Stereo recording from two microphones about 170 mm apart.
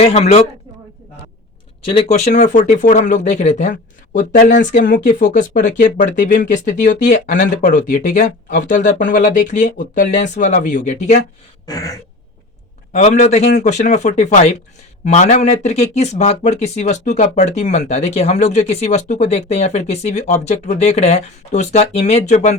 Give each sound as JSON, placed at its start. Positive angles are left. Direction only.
{"t": 0.0, "sound": "speech", "side_deg": 35}
{"t": 1.9, "sound": "speech", "side_deg": 40}
{"t": 11.6, "sound": "a sound", "side_deg": 20}
{"t": 12.9, "sound": "speech", "side_deg": 45}